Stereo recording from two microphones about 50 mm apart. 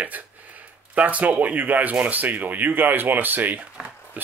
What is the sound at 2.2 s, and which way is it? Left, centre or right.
Speech, right.